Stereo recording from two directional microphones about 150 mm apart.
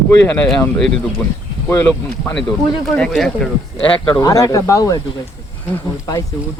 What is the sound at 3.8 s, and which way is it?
Speech, 35° left (ahead or behind).